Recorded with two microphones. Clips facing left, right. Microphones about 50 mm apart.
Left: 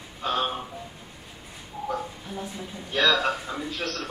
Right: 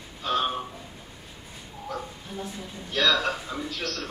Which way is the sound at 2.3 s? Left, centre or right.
Centre.